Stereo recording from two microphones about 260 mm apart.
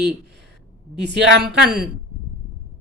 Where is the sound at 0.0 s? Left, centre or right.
Right.